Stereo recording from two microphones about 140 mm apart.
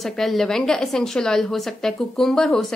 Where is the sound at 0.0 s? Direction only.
Centre (ahead or behind).